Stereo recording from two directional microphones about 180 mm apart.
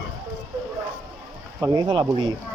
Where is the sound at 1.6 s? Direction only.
20° right (ahead or behind).